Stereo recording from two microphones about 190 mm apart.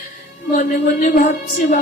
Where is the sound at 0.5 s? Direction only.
45° left (ahead or behind).